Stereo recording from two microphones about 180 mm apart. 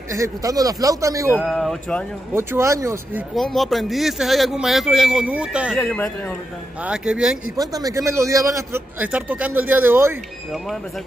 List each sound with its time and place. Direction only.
0.1 s a man's voice: 20° right (ahead or behind)
1.4 s speech: centre (ahead or behind)
2.3 s a man's voice: 15° right (ahead or behind)
3.3 s speech: centre (ahead or behind)
5.9 s a man's voice: 10° left (ahead or behind)
6.8 s speech: 5° right (ahead or behind)
7.5 s a man's voice: 20° right (ahead or behind)